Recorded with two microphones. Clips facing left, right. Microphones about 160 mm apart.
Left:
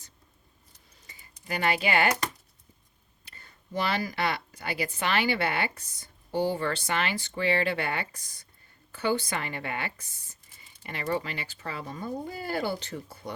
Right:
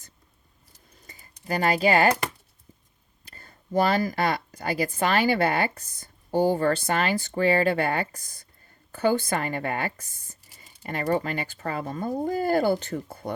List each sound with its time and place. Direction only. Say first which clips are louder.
1.0 s typing: right 6 dB; 45° right (ahead or behind)
3.2 s speech: right 7 dB; 45° right (ahead or behind)